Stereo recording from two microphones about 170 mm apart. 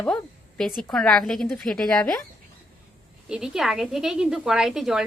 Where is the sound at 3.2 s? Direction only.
5° right (ahead or behind).